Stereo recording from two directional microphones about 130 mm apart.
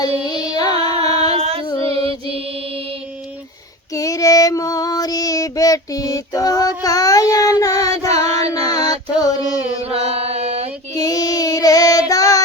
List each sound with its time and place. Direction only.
0.3 s carnatic music: 30° left (ahead or behind)
0.7 s music: 50° right (ahead or behind)
1.4 s child singing: 50° right (ahead or behind)
1.8 s mantra: 50° right (ahead or behind)
3.9 s female singing: 25° left (ahead or behind)
8.7 s music: 30° left (ahead or behind)
9.8 s mantra: 50° right (ahead or behind)
10.9 s child singing: 30° left (ahead or behind)